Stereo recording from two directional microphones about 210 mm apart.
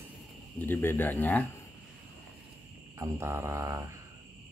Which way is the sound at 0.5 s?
10° left (ahead or behind).